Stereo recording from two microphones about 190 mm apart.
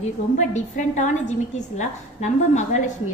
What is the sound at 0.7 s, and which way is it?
A woman's voice, 40° left (ahead or behind).